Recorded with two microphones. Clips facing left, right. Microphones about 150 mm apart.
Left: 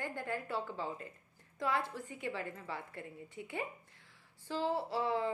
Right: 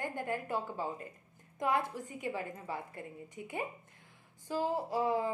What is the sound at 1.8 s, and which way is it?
Speech, 45° right (ahead or behind).